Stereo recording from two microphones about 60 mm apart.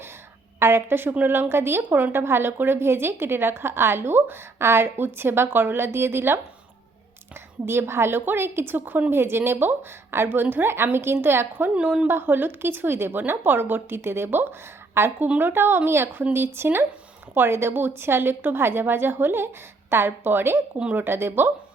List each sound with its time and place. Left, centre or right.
0.6 s a woman's voice: right
7.6 s a woman's voice: right
11.7 s a woman's voice: right
12.0 s a woman's voice: right